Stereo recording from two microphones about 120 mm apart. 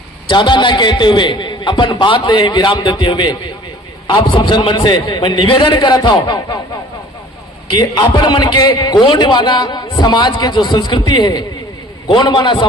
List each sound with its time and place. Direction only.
0.3 s a man's voice: 40° left (ahead or behind)
7.8 s a man's voice: 35° left (ahead or behind)